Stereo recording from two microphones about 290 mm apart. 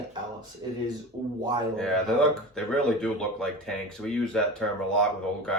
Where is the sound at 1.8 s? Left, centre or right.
Centre.